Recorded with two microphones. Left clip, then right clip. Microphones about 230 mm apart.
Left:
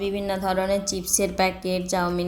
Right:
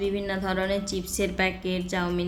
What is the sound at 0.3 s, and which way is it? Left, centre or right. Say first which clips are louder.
A woman's voice: left 4 dB; centre.